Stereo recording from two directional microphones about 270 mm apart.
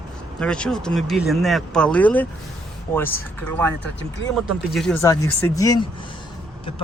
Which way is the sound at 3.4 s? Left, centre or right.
Centre.